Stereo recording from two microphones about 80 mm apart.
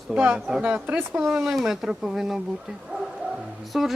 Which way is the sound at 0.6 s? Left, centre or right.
Right.